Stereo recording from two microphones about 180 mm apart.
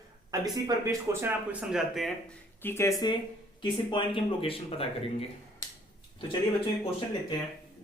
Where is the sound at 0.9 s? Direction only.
10° right (ahead or behind).